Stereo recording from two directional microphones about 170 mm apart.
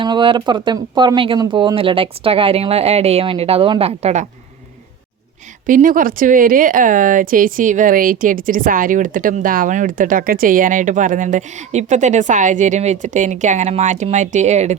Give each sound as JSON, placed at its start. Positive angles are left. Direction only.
{"t": 0.0, "sound": "speech", "side_deg": -30}
{"t": 5.6, "sound": "speech", "side_deg": -50}